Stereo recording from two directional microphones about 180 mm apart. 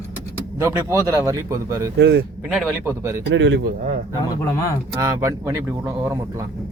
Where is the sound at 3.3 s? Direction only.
85° right.